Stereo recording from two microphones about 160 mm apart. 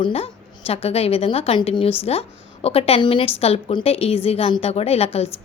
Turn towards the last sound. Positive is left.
turn(degrees=40)  # may be behind; listen again after turning